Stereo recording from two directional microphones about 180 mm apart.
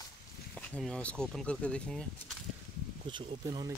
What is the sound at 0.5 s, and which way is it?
Speech, 5° left (ahead or behind).